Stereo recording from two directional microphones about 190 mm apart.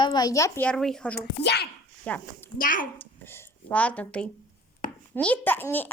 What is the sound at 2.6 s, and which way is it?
Speech, 45° left (ahead or behind).